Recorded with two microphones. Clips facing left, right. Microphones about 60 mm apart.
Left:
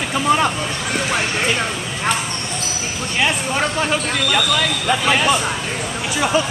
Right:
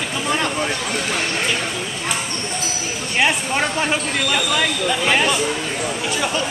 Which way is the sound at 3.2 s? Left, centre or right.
Centre.